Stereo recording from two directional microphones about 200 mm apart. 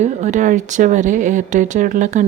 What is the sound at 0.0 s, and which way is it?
Speech, 35° right (ahead or behind).